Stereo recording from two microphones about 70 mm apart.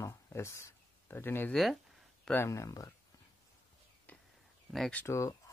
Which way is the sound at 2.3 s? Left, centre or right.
Left.